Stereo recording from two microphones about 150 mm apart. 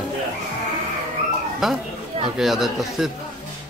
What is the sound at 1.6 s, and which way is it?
Speech, 5° right (ahead or behind).